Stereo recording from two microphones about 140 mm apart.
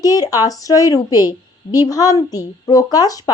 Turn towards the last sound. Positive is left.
turn(degrees=25)  # may be behind; listen again after turning